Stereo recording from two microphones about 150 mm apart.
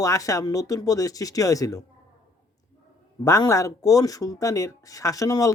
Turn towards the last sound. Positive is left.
turn(degrees=20)  # may be behind; listen again after turning